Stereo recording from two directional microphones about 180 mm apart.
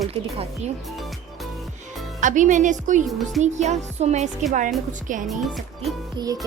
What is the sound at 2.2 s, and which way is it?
Speech, 45° right (ahead or behind).